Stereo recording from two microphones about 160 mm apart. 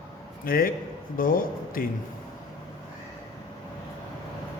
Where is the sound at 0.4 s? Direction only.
65° left (ahead or behind).